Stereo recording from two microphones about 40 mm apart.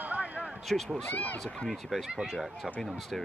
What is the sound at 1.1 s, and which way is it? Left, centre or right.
Speech, left.